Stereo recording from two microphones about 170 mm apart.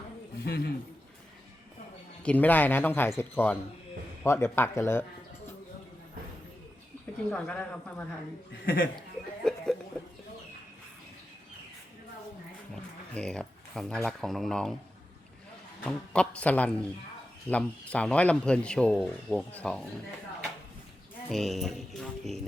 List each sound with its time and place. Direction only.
0.4 s a man's voice: 75° left (ahead or behind)
2.2 s speech: 10° left (ahead or behind)
7.3 s speech: 5° left (ahead or behind)
8.6 s speech: 60° left (ahead or behind)
9.0 s music: 5° left (ahead or behind)
12.7 s speech: 5° left (ahead or behind)
15.9 s speech: 5° left (ahead or behind)
21.2 s speech: centre (ahead or behind)